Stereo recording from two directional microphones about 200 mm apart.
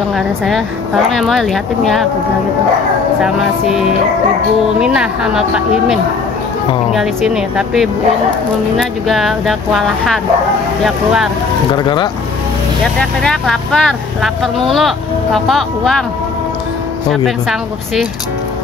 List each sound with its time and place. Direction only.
0.1 s speech: centre (ahead or behind)
4.7 s speech: 5° right (ahead or behind)
6.9 s speech: centre (ahead or behind)
9.0 s speech: centre (ahead or behind)
11.7 s speech: 20° left (ahead or behind)
13.2 s speech: 5° left (ahead or behind)
17.1 s speech: centre (ahead or behind)